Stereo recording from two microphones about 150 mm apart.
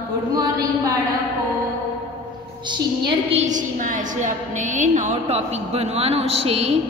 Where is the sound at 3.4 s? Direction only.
60° right (ahead or behind).